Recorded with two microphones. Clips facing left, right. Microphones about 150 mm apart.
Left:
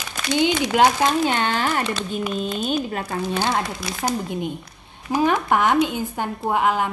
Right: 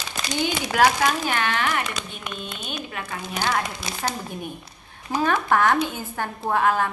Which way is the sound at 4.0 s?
20° left (ahead or behind).